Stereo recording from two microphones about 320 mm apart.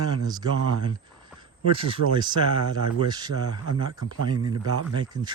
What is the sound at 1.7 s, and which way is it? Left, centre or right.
Speech, centre.